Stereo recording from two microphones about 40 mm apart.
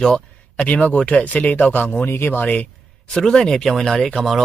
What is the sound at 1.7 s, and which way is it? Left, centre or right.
Speech, left.